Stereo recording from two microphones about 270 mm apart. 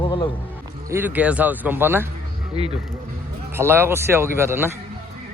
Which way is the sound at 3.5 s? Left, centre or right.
Centre.